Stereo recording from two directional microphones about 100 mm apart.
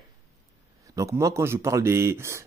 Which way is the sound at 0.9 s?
30° right (ahead or behind).